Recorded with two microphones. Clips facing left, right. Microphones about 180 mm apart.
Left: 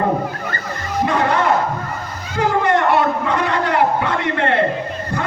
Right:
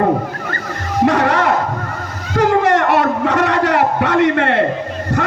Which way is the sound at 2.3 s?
75° right (ahead or behind).